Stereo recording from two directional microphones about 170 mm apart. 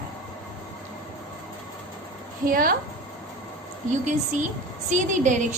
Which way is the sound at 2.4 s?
60° right (ahead or behind).